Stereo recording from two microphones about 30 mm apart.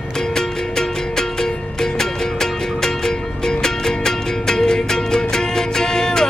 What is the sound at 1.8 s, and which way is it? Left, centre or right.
Music, centre.